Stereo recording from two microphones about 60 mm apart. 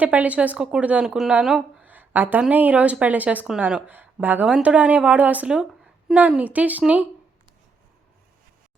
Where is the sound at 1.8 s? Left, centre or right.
Right.